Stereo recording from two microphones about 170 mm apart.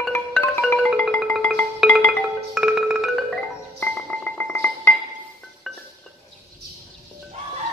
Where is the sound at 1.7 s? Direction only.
Centre (ahead or behind).